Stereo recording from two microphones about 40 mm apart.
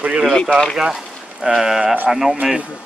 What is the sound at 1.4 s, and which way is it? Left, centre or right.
Speech, centre.